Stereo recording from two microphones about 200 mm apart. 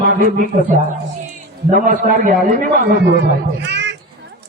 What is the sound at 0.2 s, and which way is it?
A man's voice, 40° right (ahead or behind).